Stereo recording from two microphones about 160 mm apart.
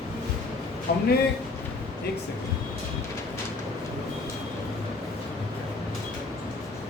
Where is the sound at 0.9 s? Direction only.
80° left.